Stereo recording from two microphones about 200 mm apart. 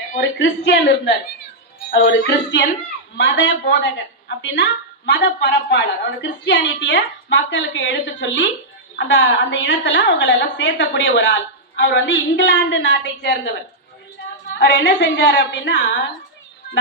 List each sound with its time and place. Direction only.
0.2 s a woman's voice: 60° left (ahead or behind)
14.6 s a woman's voice: 60° left (ahead or behind)